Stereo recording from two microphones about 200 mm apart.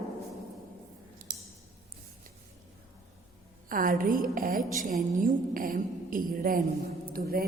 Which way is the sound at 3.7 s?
45° right (ahead or behind).